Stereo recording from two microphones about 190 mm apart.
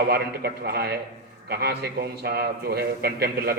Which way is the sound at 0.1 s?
55° right (ahead or behind).